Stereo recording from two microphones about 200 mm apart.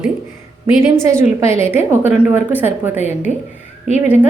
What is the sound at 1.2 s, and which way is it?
A woman's voice, 10° right (ahead or behind).